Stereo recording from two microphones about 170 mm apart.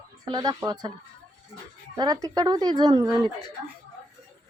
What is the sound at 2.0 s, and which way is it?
Speech, 20° right (ahead or behind).